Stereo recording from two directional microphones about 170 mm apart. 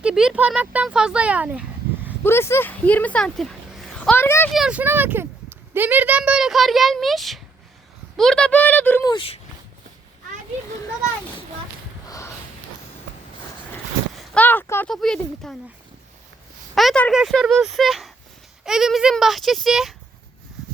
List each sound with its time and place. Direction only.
0.0 s speech: 5° right (ahead or behind)
2.2 s speech: 15° left (ahead or behind)
4.5 s speech: 5° right (ahead or behind); by 9.0 s 10° left (ahead or behind)
9.0 s speech: 30° left (ahead or behind)
12.0 s a sound: 20° left (ahead or behind)
14.3 s speech: 10° left (ahead or behind)
16.7 s speech: 5° left (ahead or behind)